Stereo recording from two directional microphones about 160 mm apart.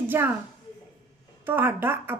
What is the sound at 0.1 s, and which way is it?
Speech, 15° right (ahead or behind).